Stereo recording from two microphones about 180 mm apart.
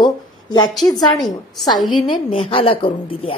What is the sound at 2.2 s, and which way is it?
A woman's voice, 30° left (ahead or behind).